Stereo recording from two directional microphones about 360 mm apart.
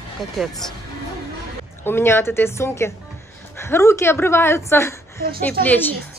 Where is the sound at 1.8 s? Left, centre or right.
Centre.